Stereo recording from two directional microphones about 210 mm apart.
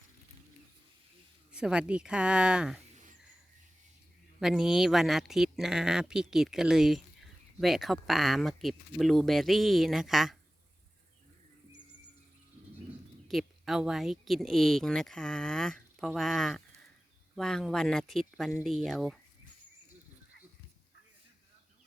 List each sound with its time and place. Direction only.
1.5 s speech: 5° right (ahead or behind)
2.9 s a sound: 35° right (ahead or behind)
4.4 s speech: centre (ahead or behind)
13.2 s speech: centre (ahead or behind)